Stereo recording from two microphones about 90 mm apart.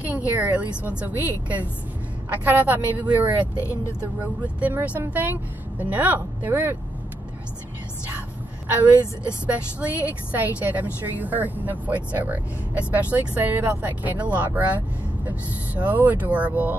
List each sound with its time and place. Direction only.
0.0 s a woman's voice: 15° right (ahead or behind)
3.5 s speech: 30° left (ahead or behind)
4.2 s a woman's voice: 20° right (ahead or behind)
8.6 s a woman's voice: 20° right (ahead or behind)